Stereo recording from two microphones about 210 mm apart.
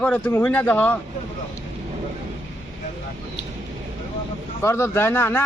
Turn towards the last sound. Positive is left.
turn(degrees=10)  # may be behind; listen again after turning